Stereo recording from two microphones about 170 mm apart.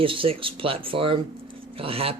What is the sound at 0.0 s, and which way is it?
Speech, 30° right (ahead or behind).